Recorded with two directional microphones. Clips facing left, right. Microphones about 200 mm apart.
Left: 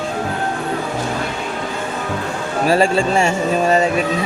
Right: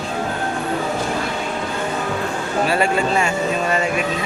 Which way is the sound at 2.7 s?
30° left (ahead or behind).